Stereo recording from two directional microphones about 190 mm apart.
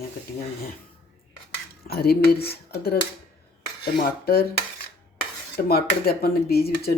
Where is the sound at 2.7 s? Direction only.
55° left (ahead or behind).